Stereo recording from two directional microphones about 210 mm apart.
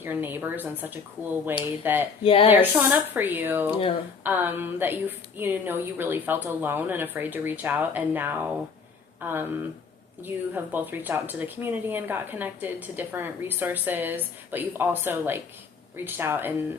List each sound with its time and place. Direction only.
0.0 s speech: 10° right (ahead or behind)
2.2 s speech: 25° left (ahead or behind)
2.5 s speech: 10° right (ahead or behind)
3.7 s speech: 25° left (ahead or behind)
4.2 s speech: 10° right (ahead or behind)